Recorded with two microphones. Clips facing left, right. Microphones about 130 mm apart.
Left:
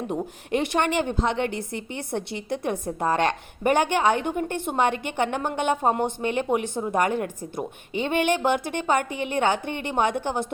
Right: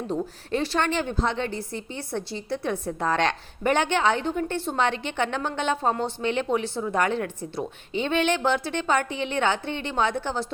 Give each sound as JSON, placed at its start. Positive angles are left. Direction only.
{"t": 0.1, "sound": "a woman's voice", "side_deg": 20}
{"t": 1.4, "sound": "a woman's voice", "side_deg": 60}
{"t": 2.5, "sound": "a woman's voice", "side_deg": 15}